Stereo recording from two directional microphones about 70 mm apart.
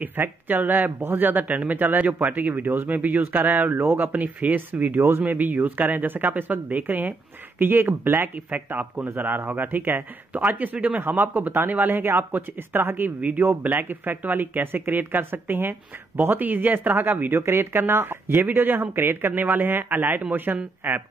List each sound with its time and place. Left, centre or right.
0.0 s speech: right
20.8 s speech: right